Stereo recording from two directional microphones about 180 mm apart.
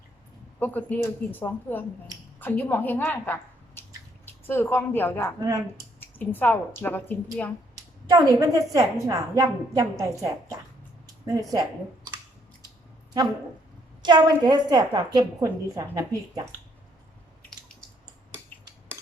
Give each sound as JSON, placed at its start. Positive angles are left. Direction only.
{"t": 0.6, "sound": "speech", "side_deg": 10}
{"t": 3.8, "sound": "drip", "side_deg": 10}
{"t": 4.3, "sound": "a woman's voice", "side_deg": 15}
{"t": 5.4, "sound": "a woman's voice", "side_deg": -20}
{"t": 6.0, "sound": "a sound", "side_deg": 10}
{"t": 6.8, "sound": "speech", "side_deg": 10}
{"t": 8.1, "sound": "a woman's voice", "side_deg": -20}
{"t": 11.0, "sound": "a sound", "side_deg": -20}
{"t": 14.0, "sound": "a woman's voice", "side_deg": -25}